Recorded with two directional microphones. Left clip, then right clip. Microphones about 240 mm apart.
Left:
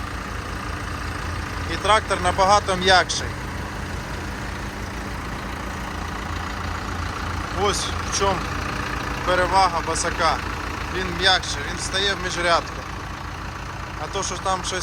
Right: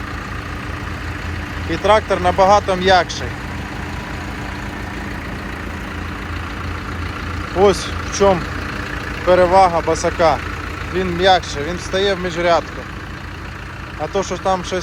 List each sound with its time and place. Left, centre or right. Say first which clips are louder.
1.7 s speech: right 5 dB; centre
7.6 s speech: right 9 dB; centre
14.1 s speech: right 6 dB; centre